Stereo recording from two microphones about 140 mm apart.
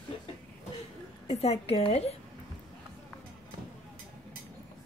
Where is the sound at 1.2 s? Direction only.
50° left (ahead or behind).